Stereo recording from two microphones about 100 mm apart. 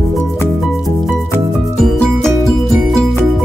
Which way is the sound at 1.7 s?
5° left (ahead or behind).